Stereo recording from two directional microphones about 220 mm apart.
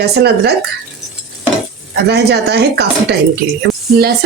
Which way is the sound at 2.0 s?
50° right (ahead or behind).